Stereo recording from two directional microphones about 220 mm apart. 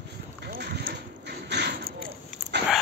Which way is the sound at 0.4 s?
45° right (ahead or behind).